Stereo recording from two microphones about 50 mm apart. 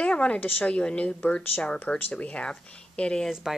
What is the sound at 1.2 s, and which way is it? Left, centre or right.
Speech, left.